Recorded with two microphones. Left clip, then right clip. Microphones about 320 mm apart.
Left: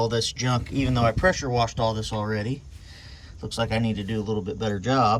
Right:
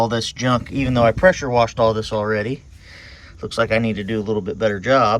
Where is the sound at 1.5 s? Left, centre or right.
Centre.